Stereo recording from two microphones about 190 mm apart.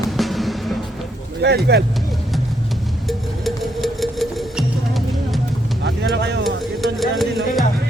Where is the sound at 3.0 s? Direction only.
Centre (ahead or behind).